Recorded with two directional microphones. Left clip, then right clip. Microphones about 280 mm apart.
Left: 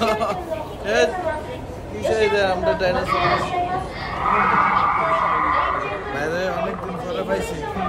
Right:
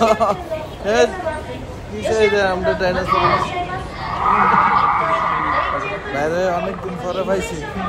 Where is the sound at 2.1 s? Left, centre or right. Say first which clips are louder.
Right 3 dB; centre.